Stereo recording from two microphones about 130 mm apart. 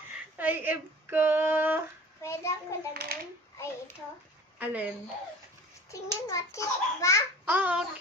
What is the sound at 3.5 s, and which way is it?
Speech, 20° left (ahead or behind).